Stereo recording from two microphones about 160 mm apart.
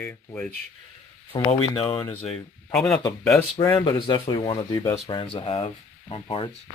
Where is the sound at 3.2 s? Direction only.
15° left (ahead or behind).